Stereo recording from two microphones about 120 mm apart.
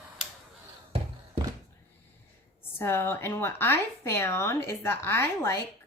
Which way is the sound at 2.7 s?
20° left (ahead or behind).